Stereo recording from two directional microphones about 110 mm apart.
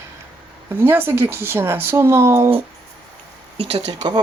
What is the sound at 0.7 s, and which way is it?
Speech, 20° right (ahead or behind).